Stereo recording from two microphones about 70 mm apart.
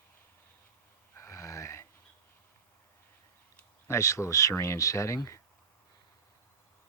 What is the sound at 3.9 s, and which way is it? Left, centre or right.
Speech, left.